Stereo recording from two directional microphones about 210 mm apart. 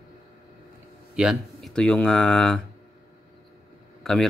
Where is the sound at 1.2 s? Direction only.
Centre (ahead or behind).